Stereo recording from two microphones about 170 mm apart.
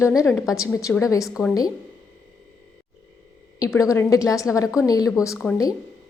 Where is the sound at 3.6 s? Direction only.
20° left (ahead or behind).